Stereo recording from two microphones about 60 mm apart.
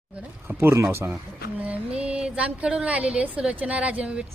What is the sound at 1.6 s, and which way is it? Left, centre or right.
A woman's voice, right.